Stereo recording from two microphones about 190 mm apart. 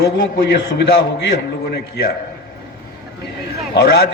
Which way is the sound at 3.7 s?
60° left (ahead or behind).